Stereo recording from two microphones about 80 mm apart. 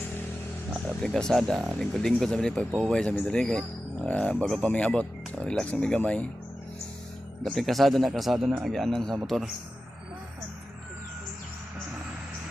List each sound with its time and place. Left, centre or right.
0.7 s a man's voice: centre
4.6 s a man's voice: centre
7.4 s speech: centre